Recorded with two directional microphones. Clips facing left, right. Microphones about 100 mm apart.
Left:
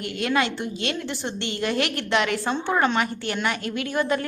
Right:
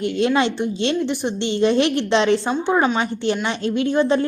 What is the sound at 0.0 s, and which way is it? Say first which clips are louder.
A woman's voice: right 6 dB; 25° right (ahead or behind).